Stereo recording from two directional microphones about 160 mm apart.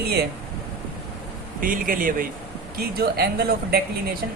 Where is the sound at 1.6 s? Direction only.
60° right (ahead or behind).